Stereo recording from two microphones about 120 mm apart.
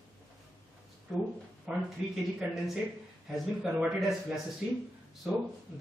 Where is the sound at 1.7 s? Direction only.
5° right (ahead or behind).